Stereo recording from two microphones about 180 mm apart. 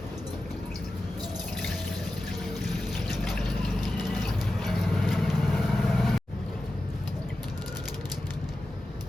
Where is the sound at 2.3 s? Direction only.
Centre (ahead or behind).